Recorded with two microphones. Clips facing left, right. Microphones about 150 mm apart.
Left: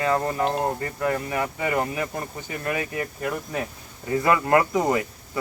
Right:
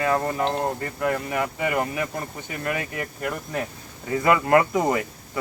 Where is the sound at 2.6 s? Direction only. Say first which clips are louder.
Left 1 dB; 25° left (ahead or behind).